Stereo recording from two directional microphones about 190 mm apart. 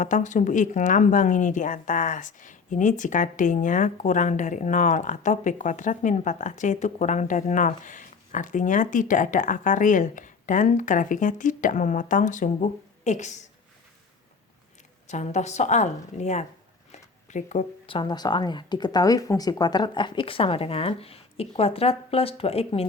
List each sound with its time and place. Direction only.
0.0 s speech: 40° left (ahead or behind)
15.0 s speech: 35° left (ahead or behind)